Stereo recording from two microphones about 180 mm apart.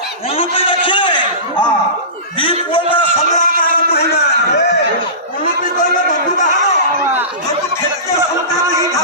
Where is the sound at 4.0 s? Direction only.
65° left (ahead or behind).